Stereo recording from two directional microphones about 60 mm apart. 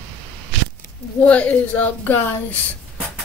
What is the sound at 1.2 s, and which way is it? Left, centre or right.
Speech, left.